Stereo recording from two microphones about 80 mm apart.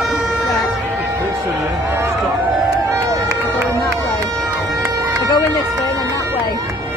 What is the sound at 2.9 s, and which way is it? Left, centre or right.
Run, right.